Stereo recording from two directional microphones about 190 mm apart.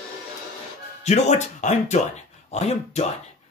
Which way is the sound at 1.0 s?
35° left (ahead or behind).